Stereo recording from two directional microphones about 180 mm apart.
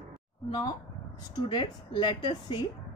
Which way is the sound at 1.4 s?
25° left (ahead or behind).